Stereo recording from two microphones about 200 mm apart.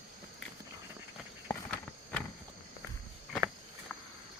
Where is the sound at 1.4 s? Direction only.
5° left (ahead or behind).